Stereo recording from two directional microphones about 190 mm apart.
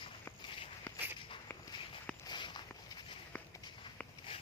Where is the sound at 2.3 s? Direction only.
25° left (ahead or behind).